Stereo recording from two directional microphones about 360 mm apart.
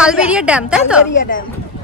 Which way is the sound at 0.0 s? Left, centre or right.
Centre.